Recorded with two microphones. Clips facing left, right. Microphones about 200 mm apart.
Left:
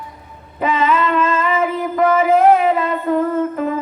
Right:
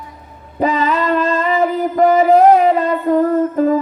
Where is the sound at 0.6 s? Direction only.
35° right (ahead or behind).